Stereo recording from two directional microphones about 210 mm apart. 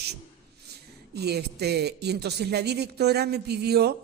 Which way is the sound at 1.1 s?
50° right (ahead or behind).